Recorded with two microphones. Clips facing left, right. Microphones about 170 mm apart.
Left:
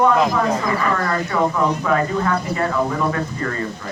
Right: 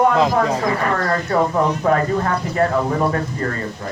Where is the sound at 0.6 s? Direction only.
50° right (ahead or behind).